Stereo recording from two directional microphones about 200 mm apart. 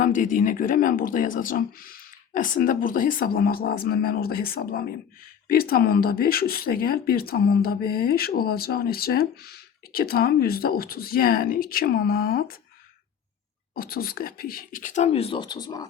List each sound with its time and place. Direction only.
0.0 s speech: 40° left (ahead or behind)
13.7 s speech: 50° left (ahead or behind); by 15.9 s 20° left (ahead or behind)